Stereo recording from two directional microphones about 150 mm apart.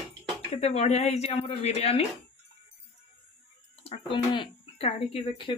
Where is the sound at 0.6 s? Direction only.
45° left (ahead or behind).